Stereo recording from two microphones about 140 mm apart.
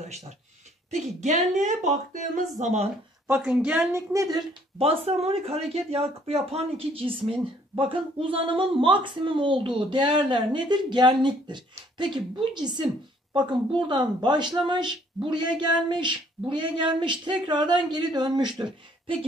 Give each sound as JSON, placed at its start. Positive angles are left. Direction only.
{"t": 0.9, "sound": "speech", "side_deg": -55}
{"t": 2.6, "sound": "speech", "side_deg": -50}
{"t": 3.3, "sound": "a woman's voice", "side_deg": -5}
{"t": 3.9, "sound": "a woman's voice", "side_deg": -25}
{"t": 4.7, "sound": "speech", "side_deg": -45}